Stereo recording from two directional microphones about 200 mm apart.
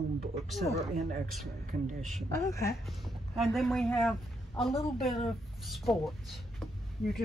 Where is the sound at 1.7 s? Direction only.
35° right (ahead or behind).